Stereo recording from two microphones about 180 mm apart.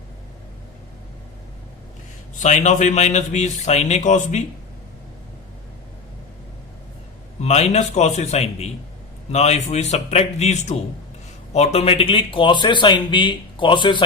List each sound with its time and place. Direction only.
2.4 s a man's voice: 40° left (ahead or behind)
7.4 s a man's voice: 40° left (ahead or behind)